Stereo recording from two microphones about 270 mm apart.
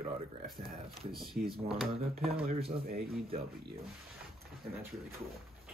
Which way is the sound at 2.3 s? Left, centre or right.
Right.